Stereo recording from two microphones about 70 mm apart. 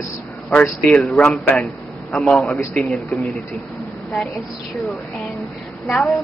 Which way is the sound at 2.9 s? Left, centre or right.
Centre.